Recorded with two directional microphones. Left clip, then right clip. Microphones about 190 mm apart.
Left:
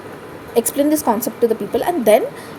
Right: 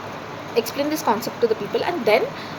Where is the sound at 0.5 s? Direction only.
65° left (ahead or behind).